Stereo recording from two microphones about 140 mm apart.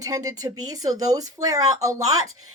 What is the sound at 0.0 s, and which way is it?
Speech, 25° right (ahead or behind).